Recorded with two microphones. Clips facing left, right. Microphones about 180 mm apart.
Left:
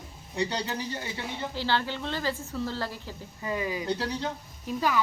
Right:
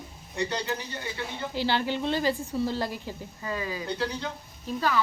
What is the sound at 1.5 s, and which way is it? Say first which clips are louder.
A woman's voice: right 3 dB; 15° right (ahead or behind).